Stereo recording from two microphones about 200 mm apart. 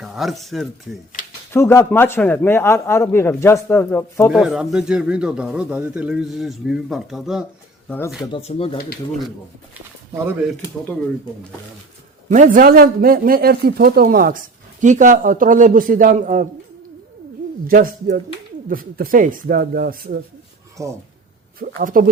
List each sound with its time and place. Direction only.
0.0 s speech: centre (ahead or behind)
1.5 s a man's voice: 10° left (ahead or behind)
4.3 s speech: 5° right (ahead or behind)
7.9 s speech: 10° left (ahead or behind)
8.3 s speech: 30° left (ahead or behind)
12.3 s speech: 40° right (ahead or behind)
17.7 s speech: 40° right (ahead or behind)
20.8 s speech: 15° right (ahead or behind)
21.8 s speech: 45° right (ahead or behind)